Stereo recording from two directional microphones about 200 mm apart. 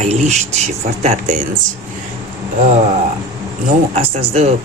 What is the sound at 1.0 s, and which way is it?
Speech, 35° right (ahead or behind).